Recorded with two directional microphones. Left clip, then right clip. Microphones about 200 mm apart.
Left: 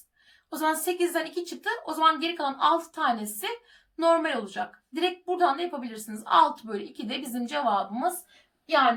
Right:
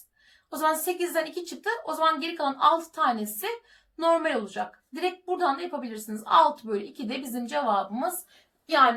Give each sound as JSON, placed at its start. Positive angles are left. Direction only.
{"t": 0.6, "sound": "a woman's voice", "side_deg": 30}
{"t": 8.6, "sound": "a woman's voice", "side_deg": 5}